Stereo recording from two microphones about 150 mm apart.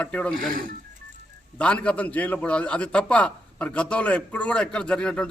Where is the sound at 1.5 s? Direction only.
10° left (ahead or behind).